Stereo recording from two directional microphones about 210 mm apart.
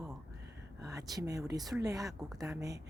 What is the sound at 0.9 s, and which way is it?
Speech, 15° right (ahead or behind).